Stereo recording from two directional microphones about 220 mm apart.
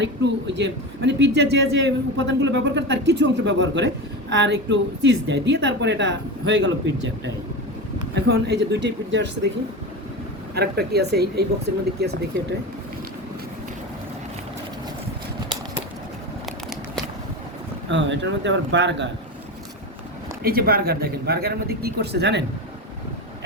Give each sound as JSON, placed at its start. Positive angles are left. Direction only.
{"t": 0.0, "sound": "a man's voice", "side_deg": -50}
{"t": 8.1, "sound": "a man's voice", "side_deg": -50}
{"t": 10.5, "sound": "a man's voice", "side_deg": -45}
{"t": 17.8, "sound": "speech", "side_deg": -55}
{"t": 20.4, "sound": "a man's voice", "side_deg": -45}